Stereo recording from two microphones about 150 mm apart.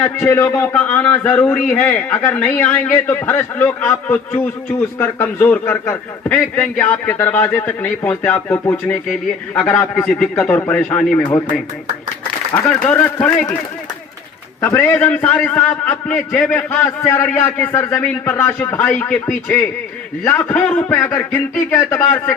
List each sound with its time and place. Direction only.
0.0 s a man's voice: 15° left (ahead or behind)
12.6 s a man's voice: 10° left (ahead or behind)
14.6 s a man's voice: 15° left (ahead or behind)